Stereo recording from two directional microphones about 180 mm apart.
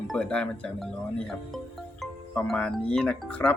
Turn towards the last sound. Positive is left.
turn(degrees=5)  # may be behind; listen again after turning